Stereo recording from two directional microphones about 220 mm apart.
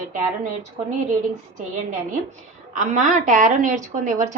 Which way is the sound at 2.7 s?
35° right (ahead or behind).